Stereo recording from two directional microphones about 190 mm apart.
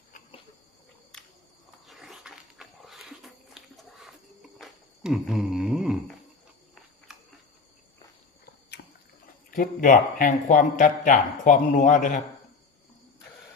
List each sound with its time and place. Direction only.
1.1 s cricket: centre (ahead or behind)
1.9 s a sound: centre (ahead or behind)
7.1 s cricket: centre (ahead or behind)
9.5 s speech: 45° left (ahead or behind)